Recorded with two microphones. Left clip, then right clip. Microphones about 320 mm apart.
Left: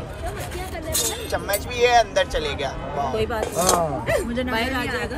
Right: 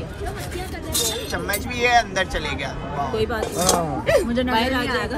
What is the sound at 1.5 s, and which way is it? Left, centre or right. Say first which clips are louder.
Speech: left 1 dB; centre.